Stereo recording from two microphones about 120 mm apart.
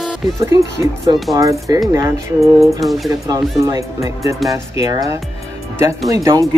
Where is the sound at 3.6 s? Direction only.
25° right (ahead or behind).